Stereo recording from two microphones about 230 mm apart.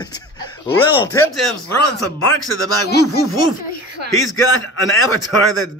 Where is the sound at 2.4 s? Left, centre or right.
Left.